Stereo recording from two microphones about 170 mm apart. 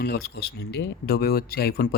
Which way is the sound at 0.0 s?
65° left (ahead or behind).